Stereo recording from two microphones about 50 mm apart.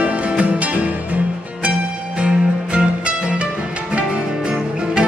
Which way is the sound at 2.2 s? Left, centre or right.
Right.